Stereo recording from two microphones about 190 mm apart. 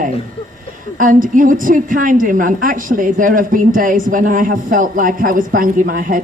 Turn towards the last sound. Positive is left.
turn(degrees=-50)  # may be behind; listen again after turning